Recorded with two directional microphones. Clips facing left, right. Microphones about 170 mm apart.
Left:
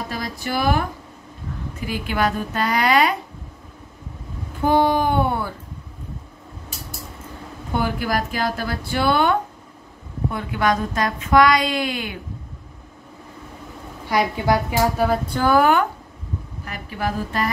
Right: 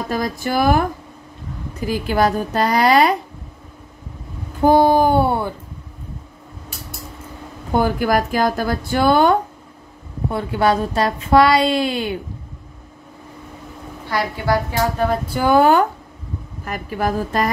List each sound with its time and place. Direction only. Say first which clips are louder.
0.1 s speech: right 8 dB; 45° right (ahead or behind)
1.9 s a woman's voice: right 5 dB; 40° right (ahead or behind)
4.6 s a sound: right 5 dB; 40° right (ahead or behind)
7.7 s a woman's voice: right 6 dB; 45° right (ahead or behind)
14.0 s a woman's voice: left 1 dB; 15° left (ahead or behind)
15.2 s speech: right 2 dB; 10° right (ahead or behind)
15.5 s speech: right 4 dB; 30° right (ahead or behind)
16.6 s speech: right 5 dB; 45° right (ahead or behind)